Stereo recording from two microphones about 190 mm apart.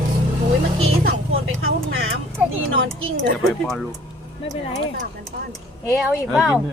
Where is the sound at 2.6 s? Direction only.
90° right.